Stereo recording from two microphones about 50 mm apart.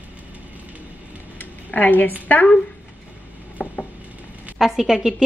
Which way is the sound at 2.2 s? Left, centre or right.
Left.